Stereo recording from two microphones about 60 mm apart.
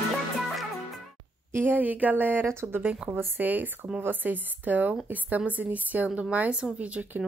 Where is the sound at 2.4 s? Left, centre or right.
Right.